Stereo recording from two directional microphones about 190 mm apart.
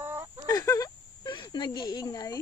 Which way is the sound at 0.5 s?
20° left (ahead or behind).